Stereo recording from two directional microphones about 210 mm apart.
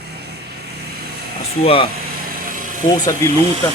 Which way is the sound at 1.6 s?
25° left (ahead or behind).